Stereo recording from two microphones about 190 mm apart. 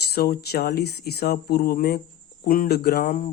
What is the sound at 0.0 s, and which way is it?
Speech, 55° left (ahead or behind).